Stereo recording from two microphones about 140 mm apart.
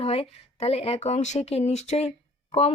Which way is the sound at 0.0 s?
45° left (ahead or behind).